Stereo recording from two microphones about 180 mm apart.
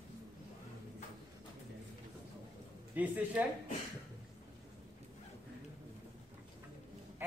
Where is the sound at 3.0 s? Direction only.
10° right (ahead or behind).